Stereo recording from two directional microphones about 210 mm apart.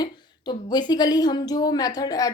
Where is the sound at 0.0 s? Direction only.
20° left (ahead or behind).